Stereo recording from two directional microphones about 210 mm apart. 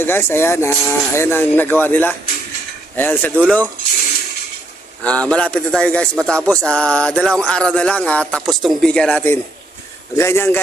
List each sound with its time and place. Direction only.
0.0 s speech: 10° left (ahead or behind)
5.0 s speech: 5° left (ahead or behind)